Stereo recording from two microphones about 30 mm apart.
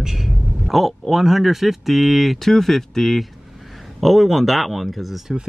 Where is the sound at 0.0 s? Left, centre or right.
Centre.